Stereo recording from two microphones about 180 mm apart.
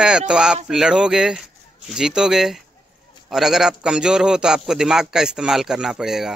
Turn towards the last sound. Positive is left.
turn(degrees=-5)  # may be behind; listen again after turning